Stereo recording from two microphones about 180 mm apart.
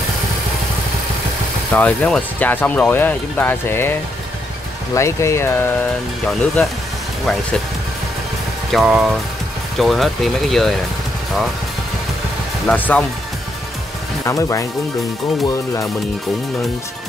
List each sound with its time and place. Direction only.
1.7 s speech: 5° left (ahead or behind)
4.9 s speech: 15° left (ahead or behind)
8.7 s speech: 5° right (ahead or behind)
12.6 s speech: 10° left (ahead or behind)
14.2 s speech: 15° left (ahead or behind)